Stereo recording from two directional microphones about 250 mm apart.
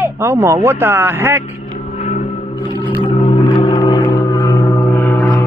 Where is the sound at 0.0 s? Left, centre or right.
Centre.